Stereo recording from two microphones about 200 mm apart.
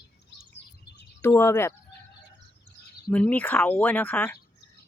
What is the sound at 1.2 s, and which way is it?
Speech, 15° left (ahead or behind).